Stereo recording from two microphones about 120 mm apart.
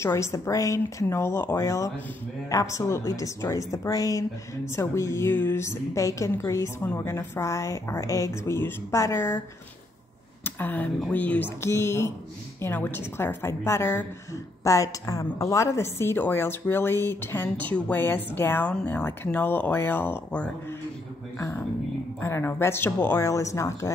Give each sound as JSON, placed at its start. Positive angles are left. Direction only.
{"t": 0.0, "sound": "a woman's voice", "side_deg": 25}
{"t": 10.4, "sound": "a sound", "side_deg": 15}
{"t": 11.0, "sound": "a woman's voice", "side_deg": 10}
{"t": 22.2, "sound": "a woman's voice", "side_deg": 20}